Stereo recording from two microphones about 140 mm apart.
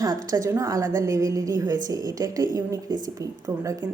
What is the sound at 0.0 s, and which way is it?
A woman's voice, 25° right (ahead or behind).